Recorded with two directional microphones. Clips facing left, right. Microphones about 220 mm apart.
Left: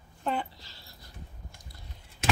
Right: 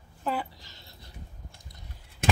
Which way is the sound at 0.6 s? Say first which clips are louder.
Right 1 dB; 20° right (ahead or behind).